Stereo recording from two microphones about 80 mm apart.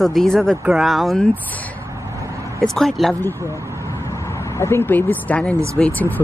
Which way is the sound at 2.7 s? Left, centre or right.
Centre.